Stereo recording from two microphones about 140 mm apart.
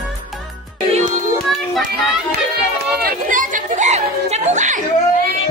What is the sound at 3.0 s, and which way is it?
Chatter, 75° right (ahead or behind).